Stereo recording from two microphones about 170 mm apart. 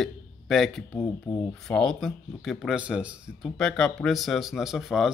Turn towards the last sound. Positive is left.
turn(degrees=0)  # may be behind; listen again after turning